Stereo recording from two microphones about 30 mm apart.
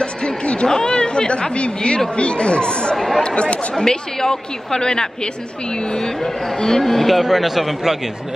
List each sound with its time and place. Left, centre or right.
0.4 s a sound: left
0.7 s speech: left
3.7 s a woman's voice: left
6.2 s speech: centre
6.8 s speech: centre
7.2 s a man's voice: centre